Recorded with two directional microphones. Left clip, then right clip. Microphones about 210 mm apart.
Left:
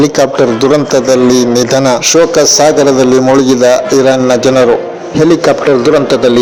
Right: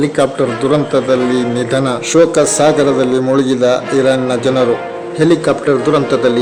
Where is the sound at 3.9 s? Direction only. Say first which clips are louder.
Left 5 dB; 20° left (ahead or behind).